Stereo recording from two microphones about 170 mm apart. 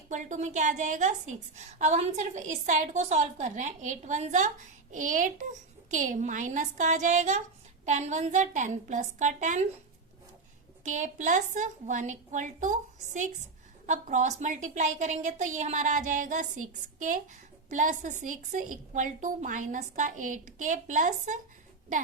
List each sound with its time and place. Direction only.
0.1 s a woman's voice: 45° right (ahead or behind)
10.8 s a woman's voice: 45° right (ahead or behind)
13.8 s a woman's voice: 45° right (ahead or behind)